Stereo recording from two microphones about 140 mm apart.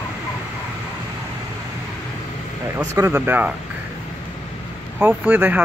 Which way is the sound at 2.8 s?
20° right (ahead or behind).